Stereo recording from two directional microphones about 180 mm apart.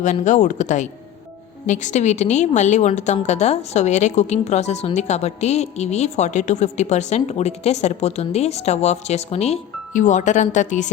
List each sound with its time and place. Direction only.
0.0 s a woman's voice: 40° left (ahead or behind)